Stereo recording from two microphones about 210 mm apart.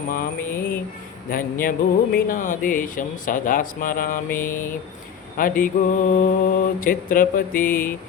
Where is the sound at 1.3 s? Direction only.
45° left (ahead or behind).